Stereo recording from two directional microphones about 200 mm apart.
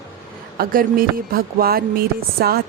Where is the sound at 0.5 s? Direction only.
45° right (ahead or behind).